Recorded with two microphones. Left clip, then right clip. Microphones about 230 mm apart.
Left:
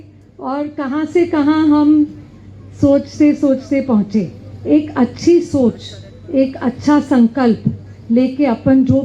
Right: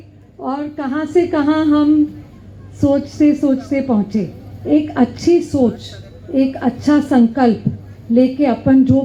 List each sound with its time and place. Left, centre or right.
0.4 s speech: left